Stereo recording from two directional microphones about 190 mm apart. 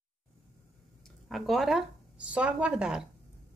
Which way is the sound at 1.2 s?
Centre (ahead or behind).